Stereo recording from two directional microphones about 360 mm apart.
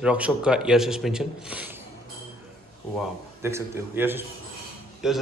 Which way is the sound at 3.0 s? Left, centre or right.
Centre.